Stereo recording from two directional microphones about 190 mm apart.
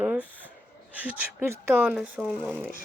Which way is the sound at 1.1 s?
10° right (ahead or behind).